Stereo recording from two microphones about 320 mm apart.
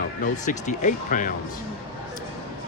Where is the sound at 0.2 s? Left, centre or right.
Left.